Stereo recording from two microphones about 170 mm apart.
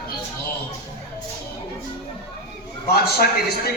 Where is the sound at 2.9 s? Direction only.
65° left (ahead or behind).